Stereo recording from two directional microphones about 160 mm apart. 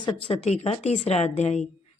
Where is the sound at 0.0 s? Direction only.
40° left (ahead or behind).